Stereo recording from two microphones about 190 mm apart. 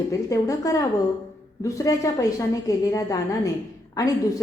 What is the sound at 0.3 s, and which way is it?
A woman's voice, 20° left (ahead or behind).